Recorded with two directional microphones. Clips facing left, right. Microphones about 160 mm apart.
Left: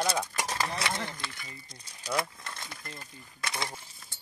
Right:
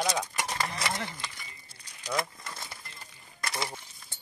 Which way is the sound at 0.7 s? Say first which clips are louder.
Even; centre (ahead or behind).